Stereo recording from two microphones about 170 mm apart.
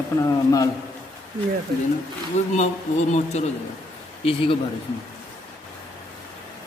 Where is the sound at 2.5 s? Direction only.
45° left (ahead or behind).